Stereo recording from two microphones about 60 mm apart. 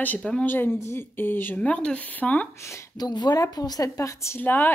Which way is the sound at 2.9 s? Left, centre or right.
Left.